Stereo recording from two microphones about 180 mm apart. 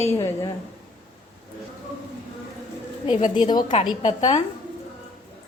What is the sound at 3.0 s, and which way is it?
Speech, 25° left (ahead or behind).